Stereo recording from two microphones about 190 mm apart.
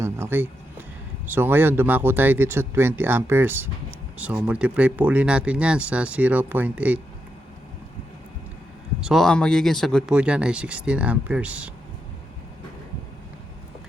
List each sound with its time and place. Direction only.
0.0 s a sound: 10° right (ahead or behind)
1.3 s speech: 10° right (ahead or behind)
9.0 s speech: centre (ahead or behind)